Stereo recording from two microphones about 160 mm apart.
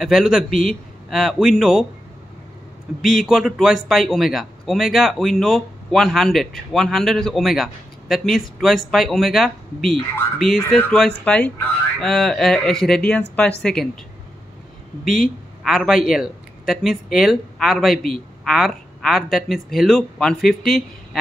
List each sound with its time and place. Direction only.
0.0 s a man's voice: centre (ahead or behind)
3.0 s a man's voice: centre (ahead or behind)
15.6 s a man's voice: centre (ahead or behind)